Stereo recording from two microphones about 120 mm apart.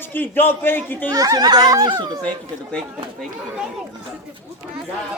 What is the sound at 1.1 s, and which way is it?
Speech, 30° right (ahead or behind).